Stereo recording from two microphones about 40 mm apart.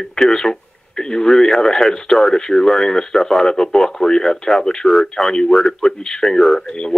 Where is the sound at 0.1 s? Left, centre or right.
Centre.